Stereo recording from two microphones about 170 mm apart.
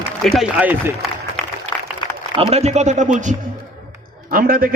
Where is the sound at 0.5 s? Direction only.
10° right (ahead or behind).